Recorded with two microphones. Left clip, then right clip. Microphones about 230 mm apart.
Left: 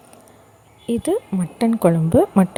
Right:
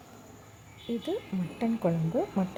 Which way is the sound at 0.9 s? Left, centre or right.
Left.